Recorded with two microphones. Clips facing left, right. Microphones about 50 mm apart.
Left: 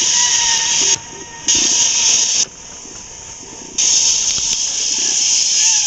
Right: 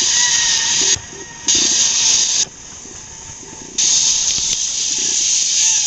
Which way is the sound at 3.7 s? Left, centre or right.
Left.